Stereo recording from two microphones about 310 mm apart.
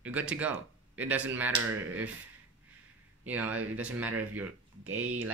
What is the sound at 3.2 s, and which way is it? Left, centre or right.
Speech, centre.